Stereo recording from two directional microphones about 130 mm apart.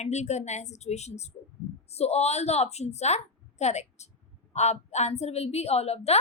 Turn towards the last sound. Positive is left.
turn(degrees=55)  # may be behind; listen again after turning